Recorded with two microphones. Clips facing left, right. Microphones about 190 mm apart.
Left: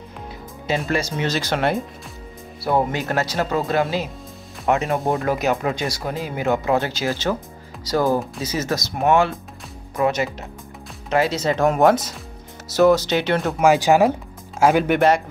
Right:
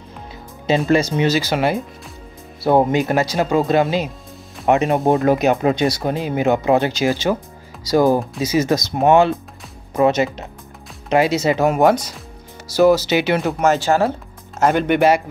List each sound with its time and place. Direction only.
0.7 s speech: 25° right (ahead or behind)
1.2 s speech: 5° right (ahead or behind)
2.6 s speech: 20° right (ahead or behind); by 13.6 s 5° right (ahead or behind)
13.6 s speech: 10° left (ahead or behind)
14.6 s speech: 5° left (ahead or behind)